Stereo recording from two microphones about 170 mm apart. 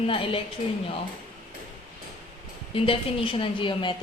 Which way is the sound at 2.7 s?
35° left (ahead or behind).